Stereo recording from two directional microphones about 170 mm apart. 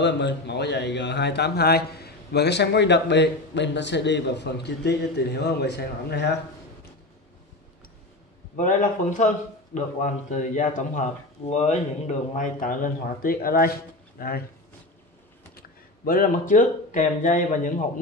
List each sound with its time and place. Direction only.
0.0 s a man's voice: 85° left; by 6.3 s 70° left (ahead or behind)
8.5 s speech: 50° left (ahead or behind)
15.5 s speech: 60° left (ahead or behind)